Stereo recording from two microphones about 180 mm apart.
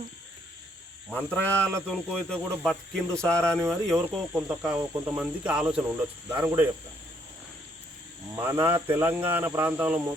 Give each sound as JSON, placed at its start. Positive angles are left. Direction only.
{"t": 1.1, "sound": "speech", "side_deg": 10}
{"t": 8.7, "sound": "speech", "side_deg": -15}